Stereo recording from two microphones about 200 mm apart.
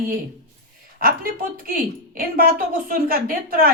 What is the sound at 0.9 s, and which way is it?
A woman's voice, 45° right (ahead or behind).